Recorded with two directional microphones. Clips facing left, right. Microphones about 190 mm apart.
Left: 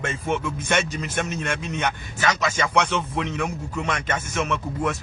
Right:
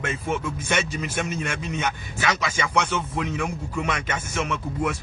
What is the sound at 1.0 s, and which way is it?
Speech, 5° right (ahead or behind).